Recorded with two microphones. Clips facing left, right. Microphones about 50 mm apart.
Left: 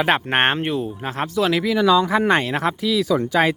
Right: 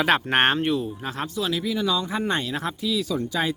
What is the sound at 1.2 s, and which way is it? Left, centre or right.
Speech, left.